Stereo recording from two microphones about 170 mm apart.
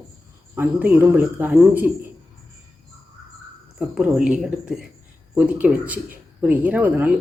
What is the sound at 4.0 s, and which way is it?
A woman's voice, 5° right (ahead or behind).